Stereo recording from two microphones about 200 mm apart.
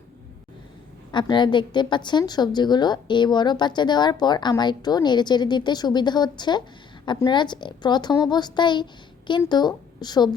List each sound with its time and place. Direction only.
1.1 s a woman's voice: 25° left (ahead or behind)